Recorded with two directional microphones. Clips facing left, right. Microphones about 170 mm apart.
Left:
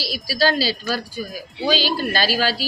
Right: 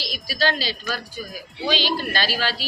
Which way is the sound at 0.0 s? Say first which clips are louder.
Left 4 dB; 35° left (ahead or behind).